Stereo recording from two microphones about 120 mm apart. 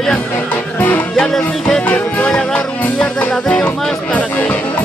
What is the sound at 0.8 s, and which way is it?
Music, 15° left (ahead or behind).